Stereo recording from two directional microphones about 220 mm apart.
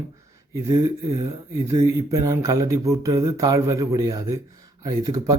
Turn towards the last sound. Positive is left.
turn(degrees=-15)  # may be behind; listen again after turning